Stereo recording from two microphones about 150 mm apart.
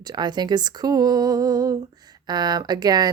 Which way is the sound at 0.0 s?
30° right (ahead or behind).